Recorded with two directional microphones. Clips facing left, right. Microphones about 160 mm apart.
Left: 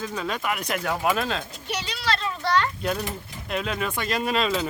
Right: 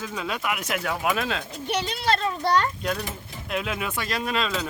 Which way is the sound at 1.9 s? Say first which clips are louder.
Right 2 dB; 50° right (ahead or behind).